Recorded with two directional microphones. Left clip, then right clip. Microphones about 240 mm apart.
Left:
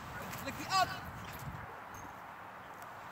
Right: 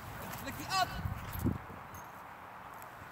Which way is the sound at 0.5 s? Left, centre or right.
Centre.